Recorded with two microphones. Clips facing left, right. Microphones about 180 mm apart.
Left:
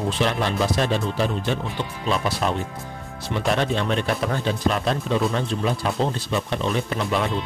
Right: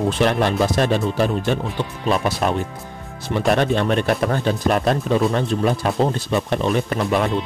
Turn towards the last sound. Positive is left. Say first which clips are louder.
# right 4 dB
turn(degrees=-50)  # may be behind; listen again after turning